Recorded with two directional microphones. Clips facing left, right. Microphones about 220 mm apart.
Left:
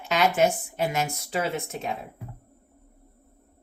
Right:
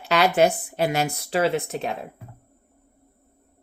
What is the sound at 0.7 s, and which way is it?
Speech, 75° right (ahead or behind).